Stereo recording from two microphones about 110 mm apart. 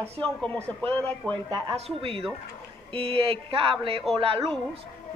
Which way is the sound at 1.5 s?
45° right (ahead or behind).